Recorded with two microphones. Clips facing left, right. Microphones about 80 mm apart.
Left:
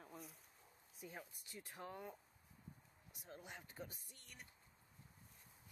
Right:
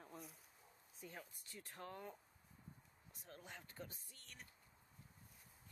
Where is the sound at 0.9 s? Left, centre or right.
Centre.